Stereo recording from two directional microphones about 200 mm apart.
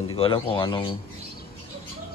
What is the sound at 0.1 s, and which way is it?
Speech, 25° left (ahead or behind).